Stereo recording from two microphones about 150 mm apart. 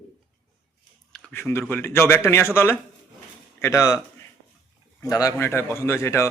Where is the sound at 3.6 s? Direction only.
20° left (ahead or behind).